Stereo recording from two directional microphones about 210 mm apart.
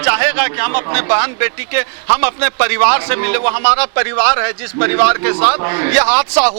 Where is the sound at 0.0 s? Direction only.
15° right (ahead or behind).